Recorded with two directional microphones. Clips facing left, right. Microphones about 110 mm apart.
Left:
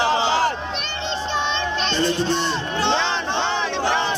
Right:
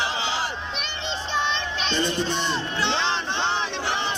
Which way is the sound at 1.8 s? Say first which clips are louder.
Left 3 dB; 10° right (ahead or behind).